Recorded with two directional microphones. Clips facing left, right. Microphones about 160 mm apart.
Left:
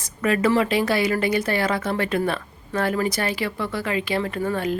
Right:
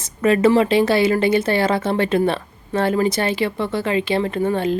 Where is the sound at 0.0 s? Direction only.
25° right (ahead or behind).